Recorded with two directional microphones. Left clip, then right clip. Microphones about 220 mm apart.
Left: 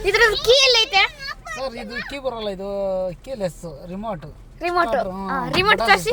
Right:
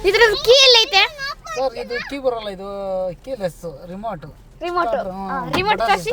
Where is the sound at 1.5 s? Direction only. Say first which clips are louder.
Right 7 dB; 35° right (ahead or behind).